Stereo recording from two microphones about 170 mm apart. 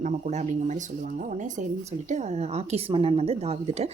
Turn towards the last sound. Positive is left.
turn(degrees=-35)  # may be behind; listen again after turning